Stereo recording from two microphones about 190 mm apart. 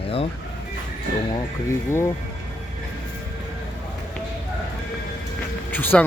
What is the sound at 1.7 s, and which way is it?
Speech, 15° left (ahead or behind).